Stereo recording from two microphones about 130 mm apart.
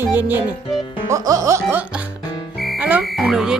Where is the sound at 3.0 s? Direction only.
Centre (ahead or behind).